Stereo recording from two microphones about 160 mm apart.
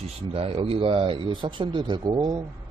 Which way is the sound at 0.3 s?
35° right (ahead or behind).